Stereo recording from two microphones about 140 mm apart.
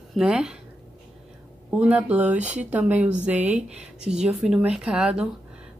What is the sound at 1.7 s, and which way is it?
Speech, 10° right (ahead or behind).